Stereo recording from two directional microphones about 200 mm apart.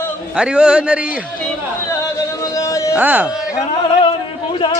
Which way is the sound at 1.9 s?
15° left (ahead or behind).